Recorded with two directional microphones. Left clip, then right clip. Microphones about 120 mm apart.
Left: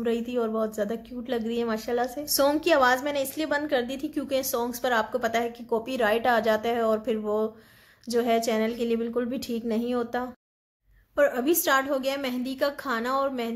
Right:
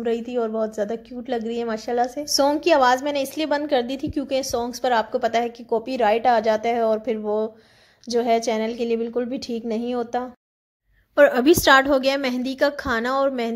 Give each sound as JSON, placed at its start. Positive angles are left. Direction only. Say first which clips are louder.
{"t": 0.0, "sound": "a woman's voice", "louder": "right 3 dB", "side_deg": -35}
{"t": 11.1, "sound": "a woman's voice", "louder": "right 8 dB", "side_deg": -90}